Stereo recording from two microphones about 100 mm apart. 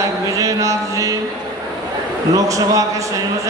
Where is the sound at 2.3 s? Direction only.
35° right (ahead or behind).